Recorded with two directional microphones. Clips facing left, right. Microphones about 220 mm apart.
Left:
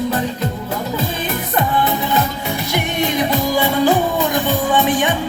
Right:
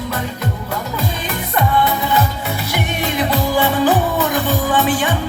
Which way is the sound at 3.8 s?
15° left (ahead or behind).